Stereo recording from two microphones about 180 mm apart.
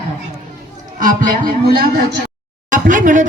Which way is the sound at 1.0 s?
45° right (ahead or behind).